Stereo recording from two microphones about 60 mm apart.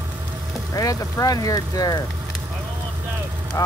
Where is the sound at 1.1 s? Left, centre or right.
Left.